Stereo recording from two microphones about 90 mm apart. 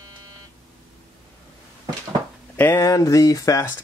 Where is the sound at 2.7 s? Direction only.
40° left (ahead or behind).